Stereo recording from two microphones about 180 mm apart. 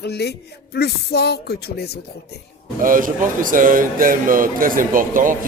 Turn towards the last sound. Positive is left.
turn(degrees=-50)  # may be behind; listen again after turning